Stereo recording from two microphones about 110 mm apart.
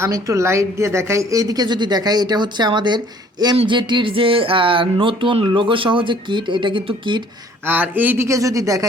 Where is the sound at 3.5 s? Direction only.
50° right (ahead or behind).